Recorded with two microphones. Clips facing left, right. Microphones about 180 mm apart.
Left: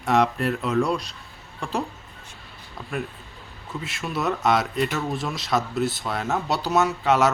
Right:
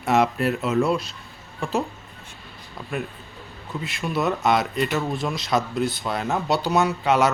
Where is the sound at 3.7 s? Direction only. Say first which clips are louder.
Right 3 dB; centre (ahead or behind).